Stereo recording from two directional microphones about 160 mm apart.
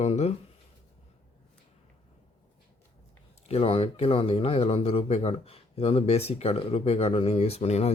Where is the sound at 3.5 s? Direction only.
35° left (ahead or behind).